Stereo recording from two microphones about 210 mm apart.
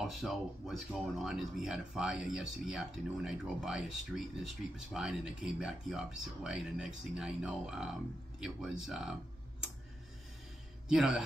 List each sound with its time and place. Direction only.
0.0 s speech: centre (ahead or behind)
10.9 s speech: 5° right (ahead or behind)